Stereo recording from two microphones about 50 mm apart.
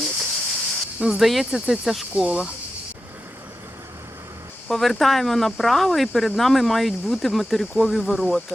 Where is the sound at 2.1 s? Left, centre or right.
Centre.